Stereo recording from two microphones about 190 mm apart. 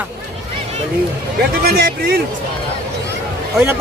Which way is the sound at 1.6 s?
55° right (ahead or behind).